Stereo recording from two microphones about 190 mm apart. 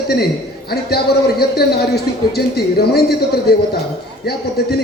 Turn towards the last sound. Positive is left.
turn(degrees=55)  # may be behind; listen again after turning